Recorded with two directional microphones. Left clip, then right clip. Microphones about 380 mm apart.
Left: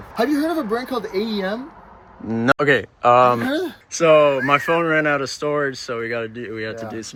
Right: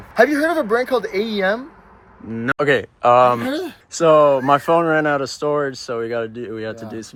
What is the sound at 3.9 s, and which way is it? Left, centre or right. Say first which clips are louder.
Speech: right 1 dB; centre.